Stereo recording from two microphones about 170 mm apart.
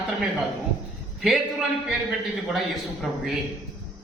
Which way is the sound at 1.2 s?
Centre (ahead or behind).